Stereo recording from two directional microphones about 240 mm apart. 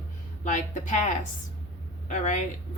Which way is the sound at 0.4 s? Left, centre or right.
Left.